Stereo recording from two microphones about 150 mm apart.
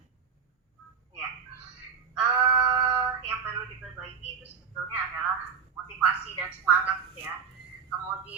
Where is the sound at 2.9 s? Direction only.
15° right (ahead or behind).